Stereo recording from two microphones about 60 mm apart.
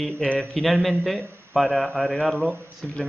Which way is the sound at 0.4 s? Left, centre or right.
Centre.